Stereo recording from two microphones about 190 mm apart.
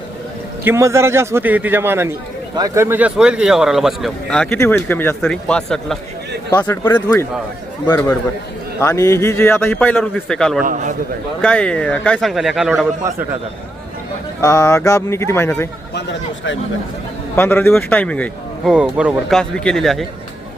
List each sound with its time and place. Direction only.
0.6 s a man's voice: 15° right (ahead or behind); by 10.6 s 5° left (ahead or behind)
10.6 s a man's voice: 45° right (ahead or behind)
11.4 s a man's voice: 5° left (ahead or behind)
13.0 s a man's voice: 15° right (ahead or behind)
14.4 s a man's voice: 15° left (ahead or behind)
17.3 s a man's voice: 10° left (ahead or behind)
18.7 s a man's voice: 5° right (ahead or behind)